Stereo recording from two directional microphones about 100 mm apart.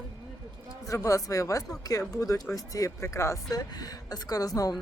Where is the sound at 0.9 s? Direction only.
30° left (ahead or behind).